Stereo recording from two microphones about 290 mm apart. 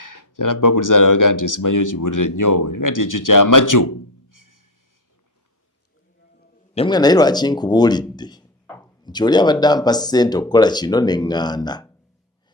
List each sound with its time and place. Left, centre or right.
0.0 s speech: left
6.7 s speech: centre